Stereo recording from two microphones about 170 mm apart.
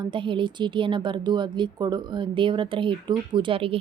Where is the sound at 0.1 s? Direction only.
30° right (ahead or behind).